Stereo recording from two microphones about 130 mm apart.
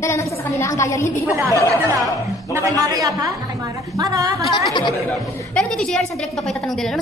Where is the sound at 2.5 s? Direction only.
25° right (ahead or behind).